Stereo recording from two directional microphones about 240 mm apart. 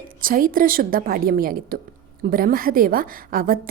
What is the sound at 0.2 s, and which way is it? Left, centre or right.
A woman's voice, right.